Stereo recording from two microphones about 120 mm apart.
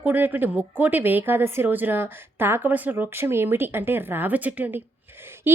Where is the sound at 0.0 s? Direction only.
15° right (ahead or behind).